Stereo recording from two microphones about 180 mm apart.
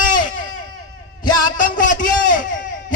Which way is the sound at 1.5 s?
50° left (ahead or behind).